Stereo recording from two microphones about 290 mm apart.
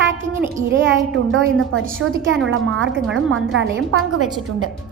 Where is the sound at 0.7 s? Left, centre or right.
Right.